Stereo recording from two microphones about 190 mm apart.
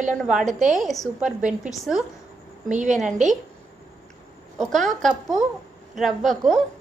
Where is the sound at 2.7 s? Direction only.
40° right (ahead or behind).